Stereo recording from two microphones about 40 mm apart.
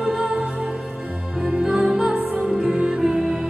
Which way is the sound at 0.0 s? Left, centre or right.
Centre.